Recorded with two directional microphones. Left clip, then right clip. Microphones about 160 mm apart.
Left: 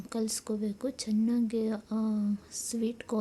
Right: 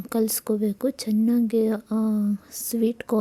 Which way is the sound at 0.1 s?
45° right (ahead or behind).